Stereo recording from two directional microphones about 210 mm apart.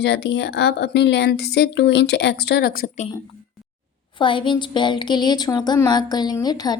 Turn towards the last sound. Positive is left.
turn(degrees=20)  # may be behind; listen again after turning